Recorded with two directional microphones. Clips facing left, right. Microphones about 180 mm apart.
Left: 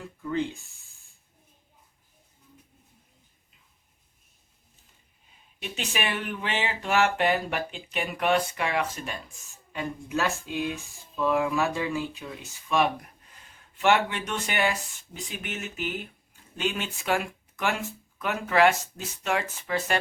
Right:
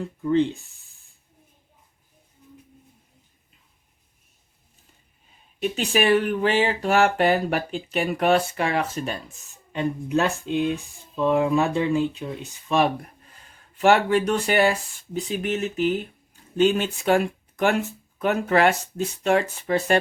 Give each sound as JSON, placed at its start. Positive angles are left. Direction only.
{"t": 0.2, "sound": "speech", "side_deg": -30}
{"t": 5.7, "sound": "speech", "side_deg": -40}
{"t": 9.7, "sound": "speech", "side_deg": -20}
{"t": 10.8, "sound": "a sound", "side_deg": -20}
{"t": 11.3, "sound": "speech", "side_deg": -30}
{"t": 11.6, "sound": "speech", "side_deg": -20}
{"t": 11.9, "sound": "speech", "side_deg": -30}